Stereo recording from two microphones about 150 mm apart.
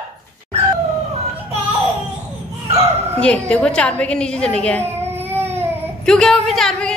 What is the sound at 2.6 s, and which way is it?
Bow-wow, 45° right (ahead or behind).